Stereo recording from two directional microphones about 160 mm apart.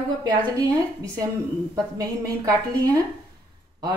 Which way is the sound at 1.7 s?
20° right (ahead or behind).